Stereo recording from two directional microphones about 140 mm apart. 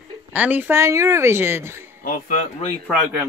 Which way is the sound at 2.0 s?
85° left.